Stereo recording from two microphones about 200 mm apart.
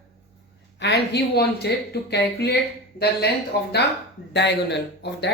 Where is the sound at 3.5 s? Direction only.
50° left (ahead or behind).